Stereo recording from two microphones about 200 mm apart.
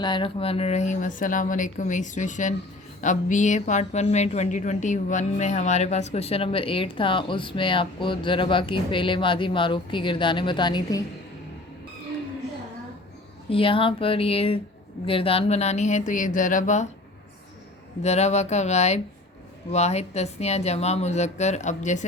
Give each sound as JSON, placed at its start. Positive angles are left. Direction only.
{"t": 0.0, "sound": "speech", "side_deg": 25}
{"t": 13.5, "sound": "speech", "side_deg": 25}
{"t": 18.0, "sound": "speech", "side_deg": 35}